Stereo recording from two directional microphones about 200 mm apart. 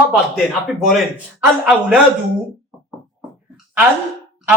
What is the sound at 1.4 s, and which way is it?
Speech, 5° right (ahead or behind).